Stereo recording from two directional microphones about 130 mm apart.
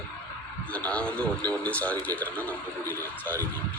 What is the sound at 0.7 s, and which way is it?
A man's voice, 10° left (ahead or behind).